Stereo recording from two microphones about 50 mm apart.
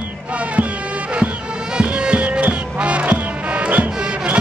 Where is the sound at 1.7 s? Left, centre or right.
Centre.